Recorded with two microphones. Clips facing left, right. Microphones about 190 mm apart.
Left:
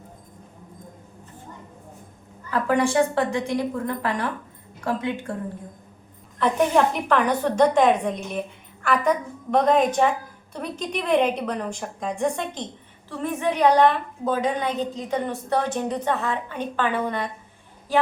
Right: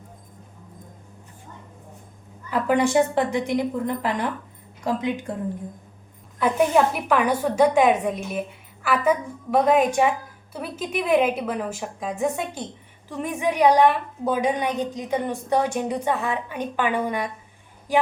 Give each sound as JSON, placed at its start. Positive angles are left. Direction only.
{"t": 2.5, "sound": "a woman's voice", "side_deg": -15}
{"t": 6.4, "sound": "a woman's voice", "side_deg": -5}